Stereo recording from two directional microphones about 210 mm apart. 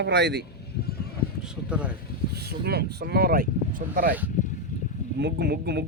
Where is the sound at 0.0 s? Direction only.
55° right (ahead or behind).